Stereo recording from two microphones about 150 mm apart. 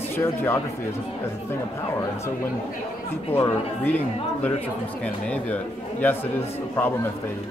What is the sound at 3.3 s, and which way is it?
Speech, 15° left (ahead or behind).